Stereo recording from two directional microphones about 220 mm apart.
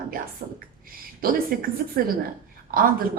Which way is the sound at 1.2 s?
40° right (ahead or behind).